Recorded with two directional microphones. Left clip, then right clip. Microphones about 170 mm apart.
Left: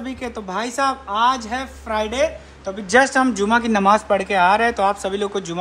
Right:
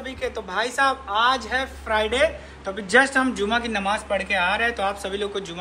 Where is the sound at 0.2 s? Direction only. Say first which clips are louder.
Right 1 dB; 55° left (ahead or behind).